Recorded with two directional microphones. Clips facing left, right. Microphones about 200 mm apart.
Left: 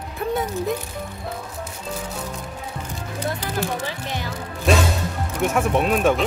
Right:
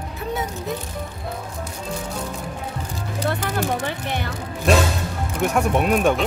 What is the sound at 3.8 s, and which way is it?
Music, 60° right (ahead or behind).